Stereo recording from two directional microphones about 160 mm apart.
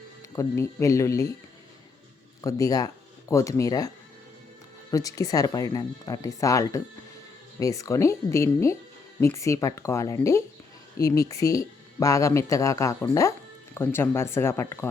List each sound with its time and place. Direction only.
0.3 s speech: 15° left (ahead or behind)
2.4 s speech: 20° left (ahead or behind)